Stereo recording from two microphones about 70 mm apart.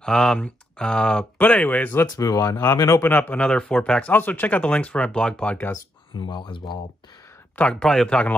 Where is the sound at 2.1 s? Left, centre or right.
Left.